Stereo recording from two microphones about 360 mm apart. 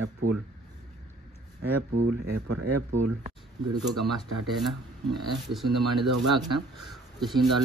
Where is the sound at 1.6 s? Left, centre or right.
Right.